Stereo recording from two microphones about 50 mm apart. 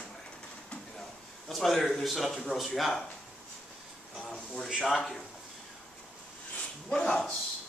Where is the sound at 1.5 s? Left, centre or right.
Centre.